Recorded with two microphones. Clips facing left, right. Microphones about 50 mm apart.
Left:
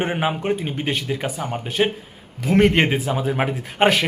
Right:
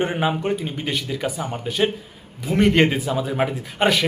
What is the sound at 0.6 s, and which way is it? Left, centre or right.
A man's voice, left.